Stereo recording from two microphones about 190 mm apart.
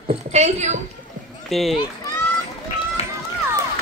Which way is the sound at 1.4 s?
Centre (ahead or behind).